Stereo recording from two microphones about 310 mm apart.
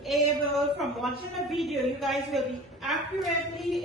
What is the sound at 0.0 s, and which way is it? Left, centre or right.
A woman's voice, centre.